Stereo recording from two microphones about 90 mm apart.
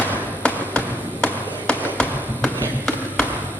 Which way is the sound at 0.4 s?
10° left (ahead or behind).